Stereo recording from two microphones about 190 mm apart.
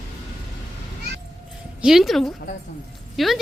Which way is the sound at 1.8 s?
Centre (ahead or behind).